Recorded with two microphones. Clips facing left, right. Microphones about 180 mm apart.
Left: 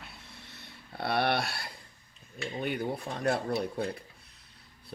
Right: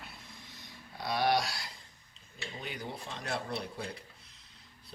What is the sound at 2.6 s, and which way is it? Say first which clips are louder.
Speech: left 9 dB; 60° left (ahead or behind).